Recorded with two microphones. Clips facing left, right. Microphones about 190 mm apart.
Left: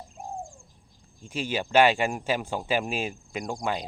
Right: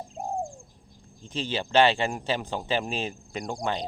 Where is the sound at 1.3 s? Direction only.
10° left (ahead or behind).